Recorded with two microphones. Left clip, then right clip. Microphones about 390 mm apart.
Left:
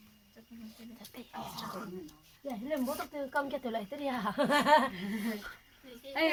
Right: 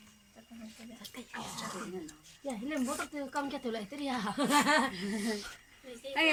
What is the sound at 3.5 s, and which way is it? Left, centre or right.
Speech, centre.